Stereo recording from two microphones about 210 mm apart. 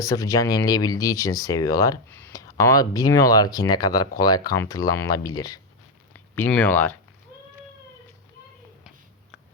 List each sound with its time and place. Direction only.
0.0 s speech: 15° left (ahead or behind)